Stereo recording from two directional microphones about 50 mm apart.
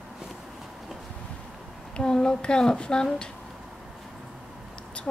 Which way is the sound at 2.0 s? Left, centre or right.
Centre.